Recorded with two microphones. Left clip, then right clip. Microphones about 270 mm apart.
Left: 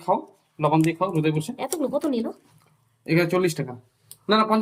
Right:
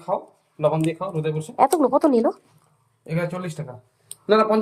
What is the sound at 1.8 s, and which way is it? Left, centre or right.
Speech, centre.